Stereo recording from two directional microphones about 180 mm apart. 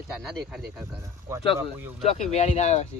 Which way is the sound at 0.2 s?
Centre (ahead or behind).